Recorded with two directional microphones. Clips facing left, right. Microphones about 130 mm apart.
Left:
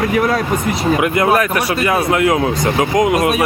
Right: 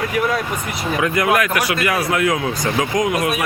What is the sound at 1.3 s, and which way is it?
Speech, 35° left (ahead or behind).